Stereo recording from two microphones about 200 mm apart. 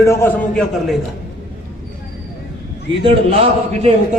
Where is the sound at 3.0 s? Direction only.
30° right (ahead or behind).